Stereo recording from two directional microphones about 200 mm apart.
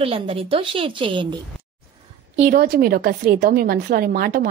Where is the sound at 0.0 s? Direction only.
30° right (ahead or behind).